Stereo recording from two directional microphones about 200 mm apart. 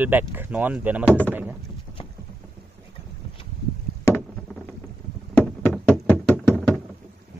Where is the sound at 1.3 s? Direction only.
10° right (ahead or behind).